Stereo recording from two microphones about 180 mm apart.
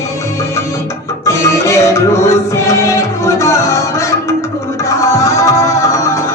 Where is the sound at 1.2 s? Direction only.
15° left (ahead or behind).